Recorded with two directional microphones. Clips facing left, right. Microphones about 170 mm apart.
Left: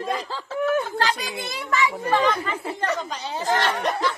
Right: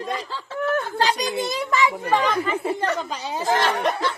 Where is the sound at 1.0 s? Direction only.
15° right (ahead or behind).